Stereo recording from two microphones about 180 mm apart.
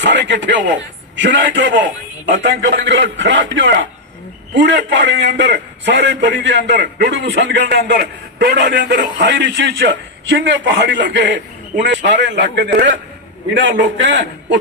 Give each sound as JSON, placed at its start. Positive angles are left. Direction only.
{"t": 0.0, "sound": "a man's voice", "side_deg": -80}
{"t": 4.5, "sound": "a man's voice", "side_deg": -80}